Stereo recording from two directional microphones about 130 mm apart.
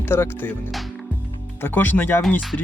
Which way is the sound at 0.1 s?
15° left (ahead or behind).